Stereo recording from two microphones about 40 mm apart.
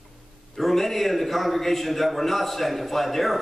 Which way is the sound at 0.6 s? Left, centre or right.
Centre.